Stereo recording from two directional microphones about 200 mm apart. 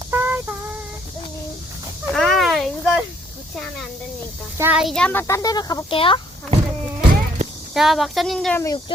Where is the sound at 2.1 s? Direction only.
Centre (ahead or behind).